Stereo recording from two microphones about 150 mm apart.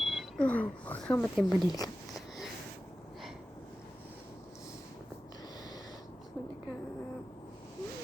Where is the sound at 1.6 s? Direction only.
25° left (ahead or behind).